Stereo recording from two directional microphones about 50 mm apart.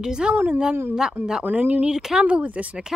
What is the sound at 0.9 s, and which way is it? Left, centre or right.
Speech, centre.